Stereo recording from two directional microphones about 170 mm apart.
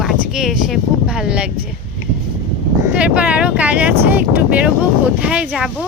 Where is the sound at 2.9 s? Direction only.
5° right (ahead or behind).